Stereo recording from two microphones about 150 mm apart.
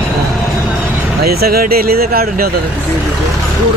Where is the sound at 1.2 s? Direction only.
90° right.